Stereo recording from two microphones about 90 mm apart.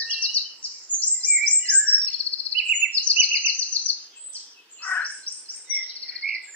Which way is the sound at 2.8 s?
15° right (ahead or behind).